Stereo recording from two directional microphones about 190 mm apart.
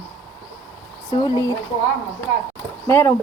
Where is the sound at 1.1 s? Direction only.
20° left (ahead or behind).